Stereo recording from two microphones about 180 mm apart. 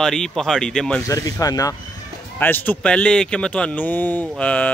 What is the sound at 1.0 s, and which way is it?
Speech, 20° left (ahead or behind).